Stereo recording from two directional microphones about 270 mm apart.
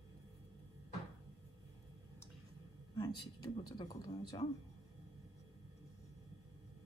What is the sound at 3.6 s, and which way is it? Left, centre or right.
Speech, centre.